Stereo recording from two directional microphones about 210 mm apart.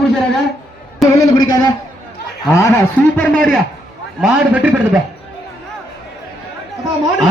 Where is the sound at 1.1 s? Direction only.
15° left (ahead or behind); by 5.0 s 5° right (ahead or behind).